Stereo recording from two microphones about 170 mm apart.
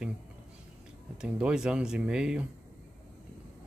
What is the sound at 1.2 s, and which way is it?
Speech, 5° right (ahead or behind).